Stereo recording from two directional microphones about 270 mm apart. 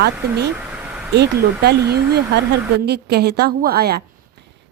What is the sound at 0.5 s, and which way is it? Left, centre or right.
Vehicle, centre.